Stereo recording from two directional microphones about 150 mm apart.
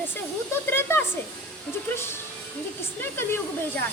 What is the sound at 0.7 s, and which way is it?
Speech, 15° left (ahead or behind).